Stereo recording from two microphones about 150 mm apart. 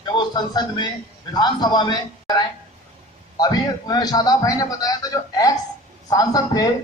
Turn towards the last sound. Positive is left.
turn(degrees=25)  # may be behind; listen again after turning